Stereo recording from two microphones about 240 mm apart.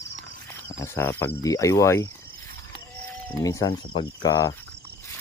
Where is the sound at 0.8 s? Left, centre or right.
Centre.